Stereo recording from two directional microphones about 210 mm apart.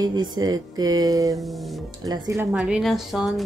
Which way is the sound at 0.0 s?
20° right (ahead or behind).